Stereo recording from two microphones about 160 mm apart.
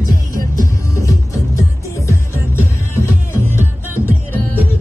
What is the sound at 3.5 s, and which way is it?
Music, 15° right (ahead or behind).